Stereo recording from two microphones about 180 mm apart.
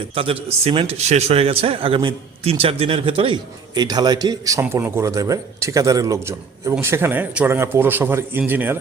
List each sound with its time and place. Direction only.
0.1 s a man's voice: 30° right (ahead or behind); by 8.8 s 10° right (ahead or behind)